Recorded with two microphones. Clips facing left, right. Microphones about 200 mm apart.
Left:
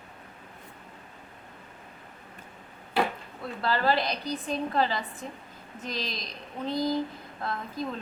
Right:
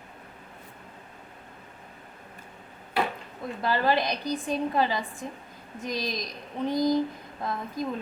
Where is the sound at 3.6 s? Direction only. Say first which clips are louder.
Right 1 dB; 15° right (ahead or behind).